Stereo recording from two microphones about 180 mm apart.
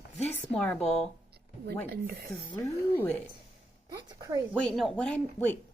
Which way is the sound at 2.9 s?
10° left (ahead or behind).